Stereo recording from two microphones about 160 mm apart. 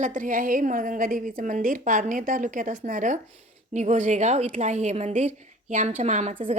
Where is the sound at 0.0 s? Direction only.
55° right (ahead or behind).